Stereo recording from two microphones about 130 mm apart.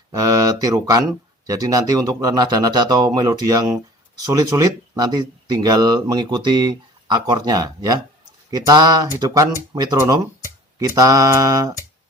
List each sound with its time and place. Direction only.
0.2 s speech: 25° right (ahead or behind)